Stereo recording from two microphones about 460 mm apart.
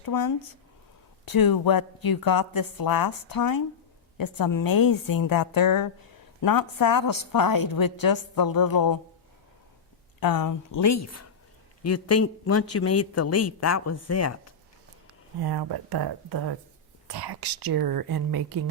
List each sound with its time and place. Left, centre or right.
0.0 s a woman's voice: left
10.2 s speech: left
15.4 s speech: right